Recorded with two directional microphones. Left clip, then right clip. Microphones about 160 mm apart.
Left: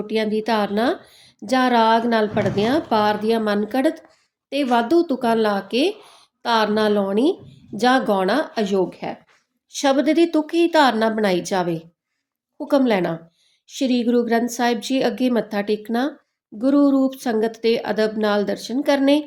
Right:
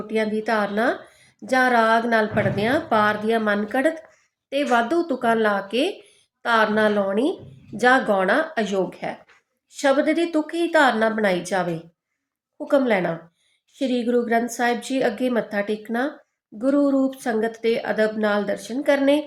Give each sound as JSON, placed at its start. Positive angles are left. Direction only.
{"t": 0.1, "sound": "a woman's voice", "side_deg": 30}